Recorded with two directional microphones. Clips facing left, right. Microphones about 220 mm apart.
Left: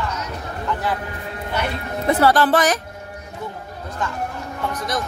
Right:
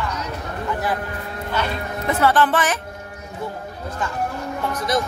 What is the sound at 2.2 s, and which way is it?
Speech, 35° left (ahead or behind).